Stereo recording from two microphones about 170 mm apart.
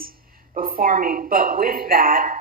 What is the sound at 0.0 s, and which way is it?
A woman's voice, 60° right (ahead or behind).